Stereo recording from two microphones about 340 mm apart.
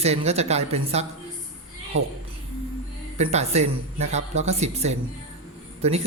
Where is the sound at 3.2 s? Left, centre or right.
Centre.